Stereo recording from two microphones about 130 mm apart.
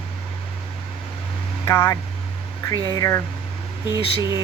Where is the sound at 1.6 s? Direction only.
20° left (ahead or behind).